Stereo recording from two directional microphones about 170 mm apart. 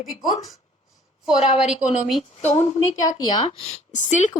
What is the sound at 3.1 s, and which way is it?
Speech, 25° left (ahead or behind).